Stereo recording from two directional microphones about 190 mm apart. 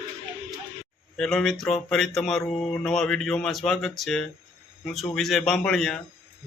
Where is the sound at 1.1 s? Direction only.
Centre (ahead or behind).